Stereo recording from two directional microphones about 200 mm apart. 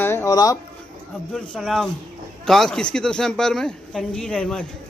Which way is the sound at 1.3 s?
5° left (ahead or behind).